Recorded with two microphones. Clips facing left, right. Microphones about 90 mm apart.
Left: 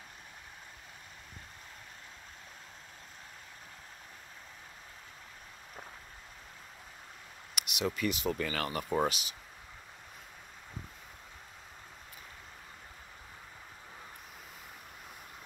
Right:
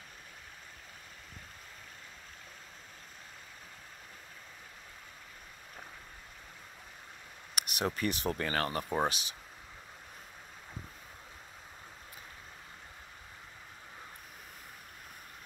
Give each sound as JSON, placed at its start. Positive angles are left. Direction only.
{"t": 7.5, "sound": "speech", "side_deg": -45}